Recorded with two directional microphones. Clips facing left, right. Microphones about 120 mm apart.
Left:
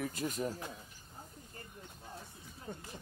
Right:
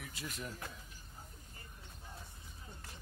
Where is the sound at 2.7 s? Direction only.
60° left (ahead or behind).